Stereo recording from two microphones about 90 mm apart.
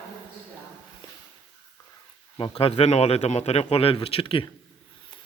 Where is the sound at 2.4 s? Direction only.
90° left.